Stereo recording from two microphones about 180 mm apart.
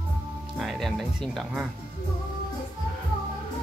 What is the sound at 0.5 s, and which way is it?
Music, centre (ahead or behind).